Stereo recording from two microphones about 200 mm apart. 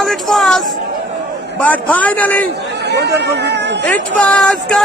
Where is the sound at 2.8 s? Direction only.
55° right (ahead or behind).